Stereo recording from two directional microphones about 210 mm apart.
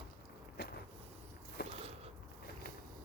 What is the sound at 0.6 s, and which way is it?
Vehicle, 50° left (ahead or behind).